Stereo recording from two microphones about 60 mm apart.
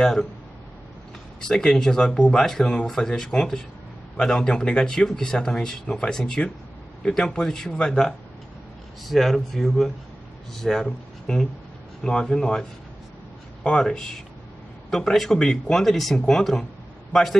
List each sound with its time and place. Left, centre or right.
0.0 s speech: centre
1.4 s speech: centre
13.7 s speech: centre